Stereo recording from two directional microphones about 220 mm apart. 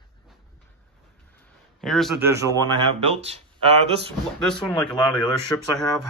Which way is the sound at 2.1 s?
10° right (ahead or behind).